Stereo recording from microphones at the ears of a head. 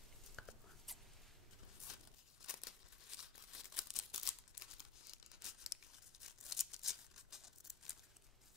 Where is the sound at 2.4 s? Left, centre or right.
Left.